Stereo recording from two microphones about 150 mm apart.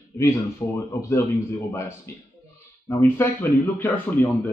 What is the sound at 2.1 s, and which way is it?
A man's voice, 15° left (ahead or behind).